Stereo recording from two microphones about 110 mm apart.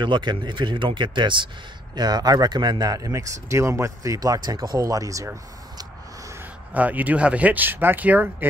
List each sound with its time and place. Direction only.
0.0 s speech: 45° right (ahead or behind); by 6.3 s 30° right (ahead or behind)
6.7 s speech: 15° right (ahead or behind)